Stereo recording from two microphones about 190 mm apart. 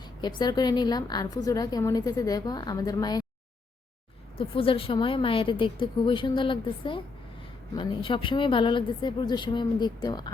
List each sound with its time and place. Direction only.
0.2 s a woman's voice: 20° left (ahead or behind)
4.4 s a woman's voice: 30° left (ahead or behind)